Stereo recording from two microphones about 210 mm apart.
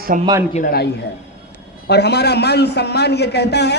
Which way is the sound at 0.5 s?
45° left (ahead or behind).